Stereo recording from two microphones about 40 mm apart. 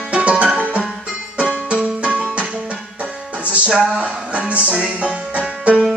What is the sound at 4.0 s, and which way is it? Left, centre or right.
Music, right.